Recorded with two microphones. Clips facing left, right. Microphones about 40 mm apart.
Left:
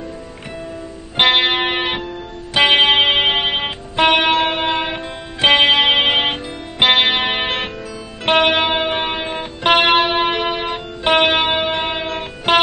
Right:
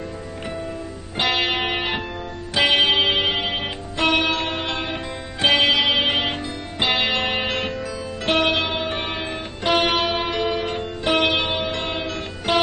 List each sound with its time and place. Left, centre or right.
1.1 s music: left
9.6 s music: left
11.8 s music: left